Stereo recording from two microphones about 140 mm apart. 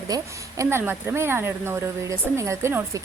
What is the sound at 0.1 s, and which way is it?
Speech, 20° right (ahead or behind).